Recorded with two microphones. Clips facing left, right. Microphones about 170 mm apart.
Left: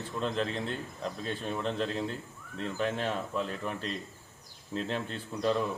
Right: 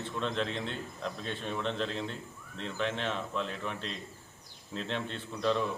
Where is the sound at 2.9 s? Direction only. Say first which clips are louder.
Left 2 dB; 40° left (ahead or behind).